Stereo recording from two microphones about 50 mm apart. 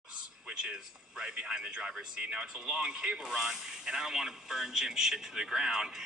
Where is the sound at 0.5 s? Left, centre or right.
Centre.